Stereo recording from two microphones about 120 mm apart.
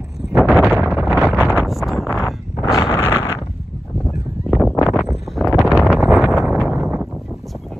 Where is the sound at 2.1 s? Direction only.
25° left (ahead or behind).